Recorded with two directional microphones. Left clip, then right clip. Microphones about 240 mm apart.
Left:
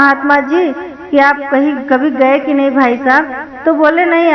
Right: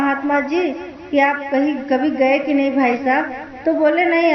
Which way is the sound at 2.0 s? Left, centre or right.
Centre.